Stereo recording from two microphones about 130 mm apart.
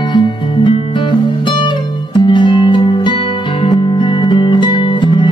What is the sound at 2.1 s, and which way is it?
Music, 35° left (ahead or behind).